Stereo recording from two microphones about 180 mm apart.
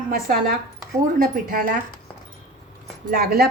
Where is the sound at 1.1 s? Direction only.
50° right (ahead or behind).